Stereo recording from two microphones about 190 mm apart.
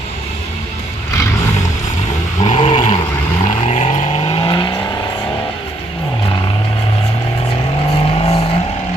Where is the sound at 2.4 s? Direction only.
30° left (ahead or behind).